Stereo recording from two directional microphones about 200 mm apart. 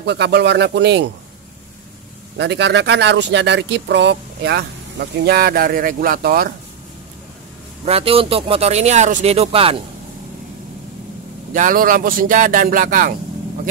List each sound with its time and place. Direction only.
0.0 s speech: 60° right (ahead or behind)
2.3 s speech: 60° right (ahead or behind)
7.8 s speech: 30° right (ahead or behind)
11.5 s speech: 40° right (ahead or behind)